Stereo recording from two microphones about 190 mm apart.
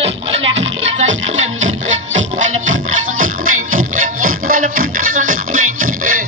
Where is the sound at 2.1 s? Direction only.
90° right.